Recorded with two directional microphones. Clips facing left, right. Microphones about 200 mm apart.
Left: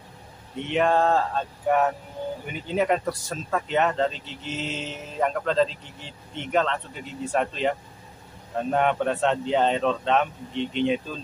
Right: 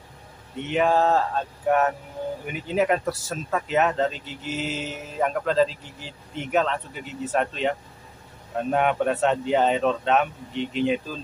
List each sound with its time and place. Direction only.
0.7 s speech: 5° right (ahead or behind)